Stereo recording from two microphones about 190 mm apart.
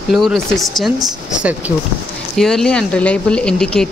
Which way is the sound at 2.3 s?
Centre (ahead or behind).